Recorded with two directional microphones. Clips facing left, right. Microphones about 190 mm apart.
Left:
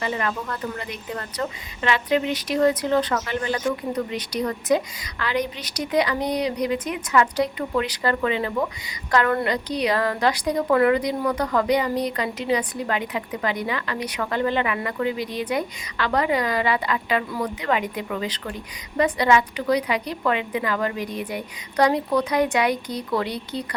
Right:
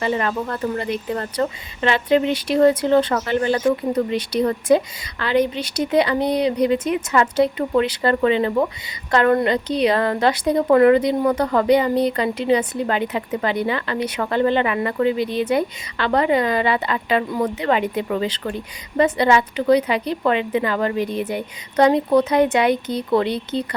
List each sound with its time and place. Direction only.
0.0 s a woman's voice: 35° right (ahead or behind)